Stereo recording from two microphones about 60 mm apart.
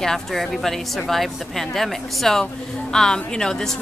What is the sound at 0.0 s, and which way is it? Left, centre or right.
A woman's voice, centre.